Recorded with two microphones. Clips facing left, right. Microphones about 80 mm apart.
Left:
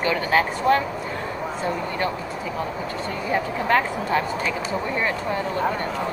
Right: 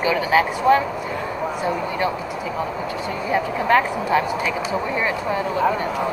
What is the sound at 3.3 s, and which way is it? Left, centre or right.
Speech, centre.